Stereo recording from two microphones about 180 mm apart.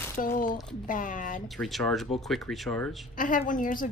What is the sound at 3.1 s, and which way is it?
Speech, 45° left (ahead or behind).